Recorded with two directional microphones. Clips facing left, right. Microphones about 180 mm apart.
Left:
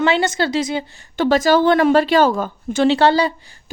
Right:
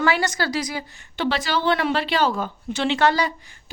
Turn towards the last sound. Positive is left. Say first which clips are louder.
# left 5 dB
turn(degrees=30)  # may be behind; listen again after turning